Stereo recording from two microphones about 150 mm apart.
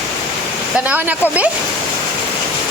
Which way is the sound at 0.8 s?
10° right (ahead or behind).